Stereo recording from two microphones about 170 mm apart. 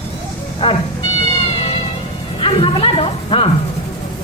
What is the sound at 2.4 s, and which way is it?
Music, 30° left (ahead or behind).